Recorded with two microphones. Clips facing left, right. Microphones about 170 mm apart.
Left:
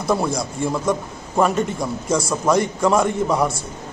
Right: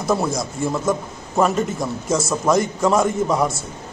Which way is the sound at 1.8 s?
25° right (ahead or behind).